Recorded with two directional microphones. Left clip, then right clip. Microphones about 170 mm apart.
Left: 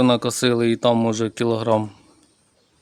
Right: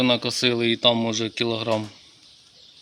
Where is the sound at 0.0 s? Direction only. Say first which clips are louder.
Left 2 dB; 80° left.